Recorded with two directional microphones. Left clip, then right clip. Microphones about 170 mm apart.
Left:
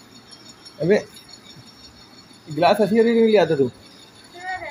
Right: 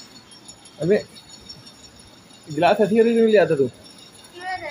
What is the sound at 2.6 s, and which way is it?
Speech, 25° left (ahead or behind).